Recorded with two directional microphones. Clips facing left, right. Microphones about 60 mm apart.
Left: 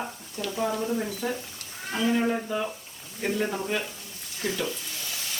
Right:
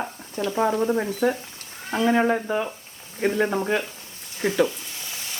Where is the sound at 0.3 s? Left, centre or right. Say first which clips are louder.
Right 6 dB; right.